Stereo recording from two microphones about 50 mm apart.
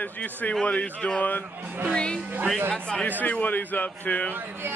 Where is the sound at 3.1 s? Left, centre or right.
Left.